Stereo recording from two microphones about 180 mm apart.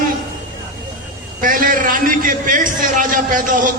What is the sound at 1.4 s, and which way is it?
A man's voice, 50° right (ahead or behind).